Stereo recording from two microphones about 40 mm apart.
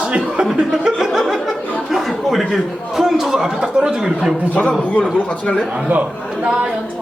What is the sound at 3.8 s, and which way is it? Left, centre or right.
Speech, right.